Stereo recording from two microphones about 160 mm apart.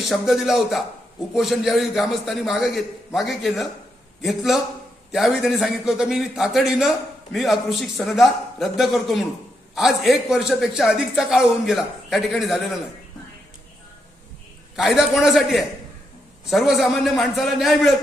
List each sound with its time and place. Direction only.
0.0 s a man's voice: centre (ahead or behind)
14.8 s a man's voice: centre (ahead or behind)